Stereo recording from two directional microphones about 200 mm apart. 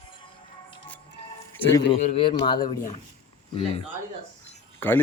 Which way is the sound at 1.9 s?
30° left (ahead or behind).